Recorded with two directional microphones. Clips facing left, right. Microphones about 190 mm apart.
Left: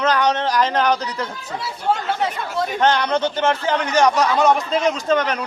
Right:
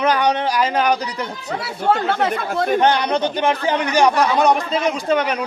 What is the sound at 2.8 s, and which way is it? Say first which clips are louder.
A man's voice: right 1 dB; 15° right (ahead or behind).